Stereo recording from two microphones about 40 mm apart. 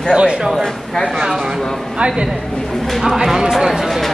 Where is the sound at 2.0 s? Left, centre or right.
Right.